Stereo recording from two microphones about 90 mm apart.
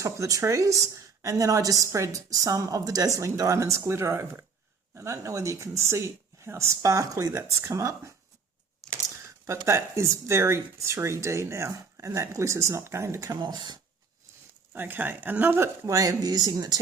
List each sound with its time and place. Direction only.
0.0 s a woman's voice: 35° right (ahead or behind)
8.8 s a sound: 5° left (ahead or behind)
9.2 s a woman's voice: 30° right (ahead or behind)
13.4 s speech: 55° right (ahead or behind)
14.7 s a woman's voice: 20° right (ahead or behind); by 16.8 s 50° right (ahead or behind)